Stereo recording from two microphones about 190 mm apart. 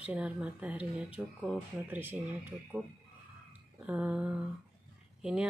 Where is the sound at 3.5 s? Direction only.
10° right (ahead or behind).